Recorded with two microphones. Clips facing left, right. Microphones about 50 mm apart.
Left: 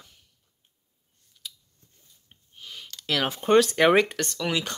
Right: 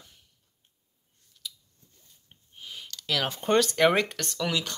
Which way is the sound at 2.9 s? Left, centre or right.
Centre.